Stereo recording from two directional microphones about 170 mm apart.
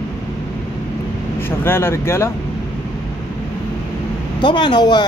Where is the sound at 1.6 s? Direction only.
15° left (ahead or behind).